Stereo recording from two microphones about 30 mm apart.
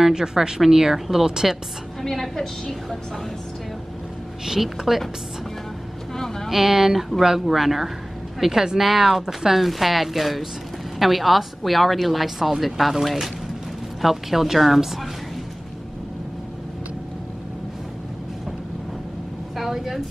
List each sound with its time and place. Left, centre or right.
0.0 s speech: right
2.0 s a woman's voice: centre
4.6 s speech: centre
6.1 s speech: centre
6.5 s a woman's voice: centre
9.2 s speech: centre
9.6 s a woman's voice: centre
19.5 s a sound: centre